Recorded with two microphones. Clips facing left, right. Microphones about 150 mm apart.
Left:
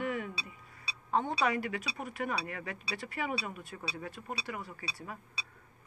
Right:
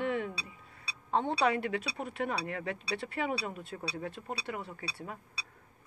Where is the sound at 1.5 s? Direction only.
60° right (ahead or behind).